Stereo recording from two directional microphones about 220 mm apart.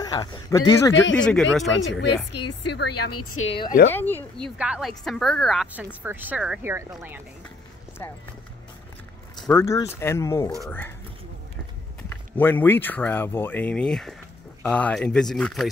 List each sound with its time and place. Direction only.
0.0 s speech: 20° left (ahead or behind)
0.9 s speech: 55° left (ahead or behind)
1.2 s a woman's voice: 5° left (ahead or behind)
2.3 s a woman's voice: 90° left
3.9 s speech: 10° left (ahead or behind)
4.6 s a woman's voice: 5° right (ahead or behind)
8.0 s speech: 10° left (ahead or behind)
9.4 s speech: 10° left (ahead or behind)
12.4 s a woman's voice: 10° left (ahead or behind)